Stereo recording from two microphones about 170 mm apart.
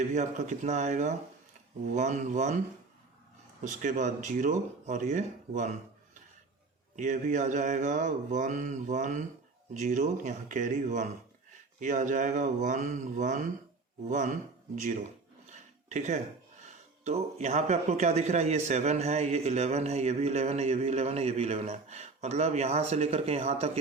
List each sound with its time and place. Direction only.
0.0 s speech: 45° right (ahead or behind)
3.6 s speech: 45° right (ahead or behind)
6.9 s speech: 45° right (ahead or behind)
15.4 s a sound: 45° right (ahead or behind)
17.0 s a man's voice: 40° right (ahead or behind)